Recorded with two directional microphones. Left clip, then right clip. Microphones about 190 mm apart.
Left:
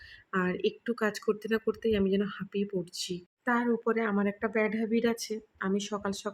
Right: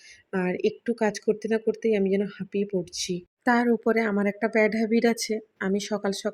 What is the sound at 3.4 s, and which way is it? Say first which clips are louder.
Speech: right 6 dB; 25° right (ahead or behind).